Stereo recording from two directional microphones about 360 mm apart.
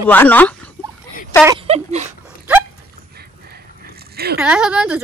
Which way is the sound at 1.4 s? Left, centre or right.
Centre.